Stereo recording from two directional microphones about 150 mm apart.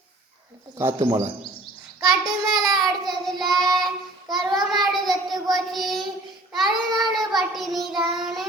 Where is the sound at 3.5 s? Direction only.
25° right (ahead or behind).